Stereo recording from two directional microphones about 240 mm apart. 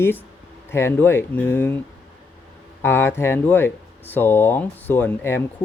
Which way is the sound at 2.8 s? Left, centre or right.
Centre.